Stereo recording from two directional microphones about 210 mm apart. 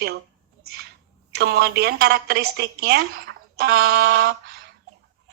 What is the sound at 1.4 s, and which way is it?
A woman's voice, 50° right (ahead or behind).